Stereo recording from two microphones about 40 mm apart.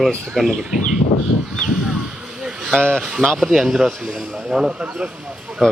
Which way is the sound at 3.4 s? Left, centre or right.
Centre.